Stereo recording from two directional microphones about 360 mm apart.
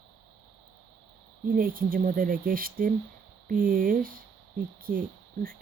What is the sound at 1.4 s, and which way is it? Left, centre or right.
Speech, right.